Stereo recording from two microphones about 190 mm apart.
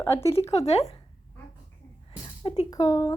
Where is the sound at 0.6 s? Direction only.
35° left (ahead or behind).